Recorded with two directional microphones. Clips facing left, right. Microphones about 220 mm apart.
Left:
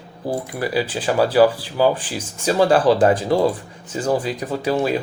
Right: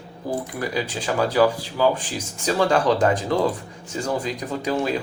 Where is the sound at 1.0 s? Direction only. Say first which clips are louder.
Left 4 dB; 30° left (ahead or behind).